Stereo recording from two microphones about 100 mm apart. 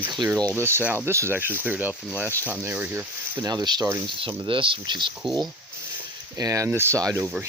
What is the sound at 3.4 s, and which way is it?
Speech, 45° right (ahead or behind).